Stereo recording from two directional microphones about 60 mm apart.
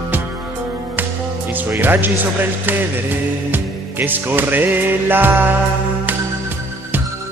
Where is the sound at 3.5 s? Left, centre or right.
Right.